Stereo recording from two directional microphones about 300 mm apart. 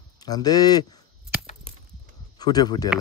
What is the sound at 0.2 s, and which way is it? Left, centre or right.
Speech, centre.